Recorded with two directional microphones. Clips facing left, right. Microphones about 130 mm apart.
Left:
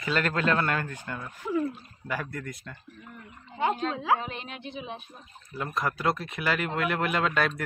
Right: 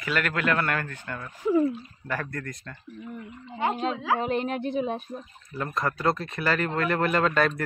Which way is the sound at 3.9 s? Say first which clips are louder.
Left 1 dB; 25° left (ahead or behind).